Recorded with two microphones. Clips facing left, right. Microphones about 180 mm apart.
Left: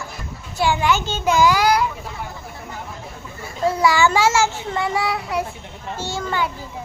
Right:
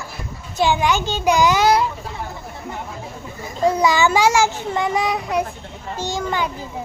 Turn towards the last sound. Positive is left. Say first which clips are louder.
# right 1 dB
turn(degrees=-15)  # may be behind; listen again after turning